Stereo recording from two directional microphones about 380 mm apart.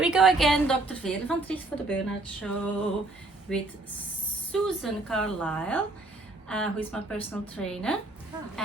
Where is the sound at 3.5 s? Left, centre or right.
Centre.